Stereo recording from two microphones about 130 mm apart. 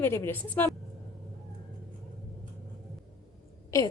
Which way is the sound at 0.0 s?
15° left (ahead or behind).